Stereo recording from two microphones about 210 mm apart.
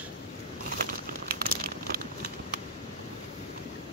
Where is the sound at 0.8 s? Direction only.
45° right (ahead or behind).